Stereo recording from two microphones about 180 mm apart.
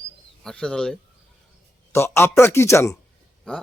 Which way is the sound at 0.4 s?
5° left (ahead or behind).